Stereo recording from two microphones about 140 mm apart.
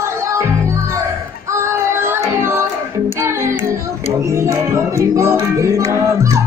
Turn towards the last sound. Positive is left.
turn(degrees=-20)  # may be behind; listen again after turning